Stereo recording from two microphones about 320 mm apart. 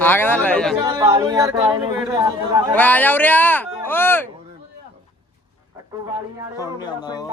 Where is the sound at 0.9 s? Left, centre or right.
Centre.